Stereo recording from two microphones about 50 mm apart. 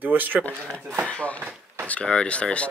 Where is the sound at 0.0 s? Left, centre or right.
Right.